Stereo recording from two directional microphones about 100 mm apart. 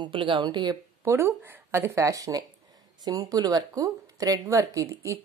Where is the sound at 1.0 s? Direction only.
30° right (ahead or behind).